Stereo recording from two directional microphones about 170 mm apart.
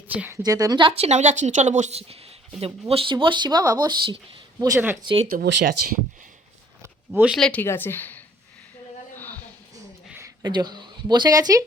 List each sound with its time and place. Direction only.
0.1 s a woman's voice: 10° right (ahead or behind)
0.4 s a woman's voice: 20° right (ahead or behind)
5.3 s speech: 60° right (ahead or behind)
7.1 s speech: 10° right (ahead or behind)
7.3 s a woman's voice: 5° left (ahead or behind)
9.1 s a sound: 10° left (ahead or behind)
10.1 s a sound: 15° right (ahead or behind)
10.4 s speech: 25° right (ahead or behind)